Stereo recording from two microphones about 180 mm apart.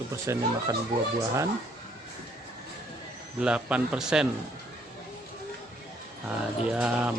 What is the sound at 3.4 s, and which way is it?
Speech, 5° right (ahead or behind).